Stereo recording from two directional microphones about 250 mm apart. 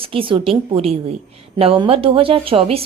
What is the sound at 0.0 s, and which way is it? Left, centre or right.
A woman's voice, right.